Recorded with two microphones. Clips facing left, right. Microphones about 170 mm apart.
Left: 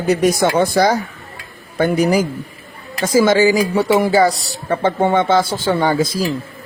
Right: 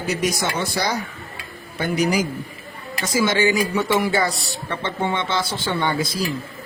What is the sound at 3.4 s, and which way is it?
Speech, 35° left (ahead or behind).